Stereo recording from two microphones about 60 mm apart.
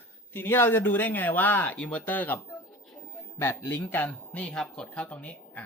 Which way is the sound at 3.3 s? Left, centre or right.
Left.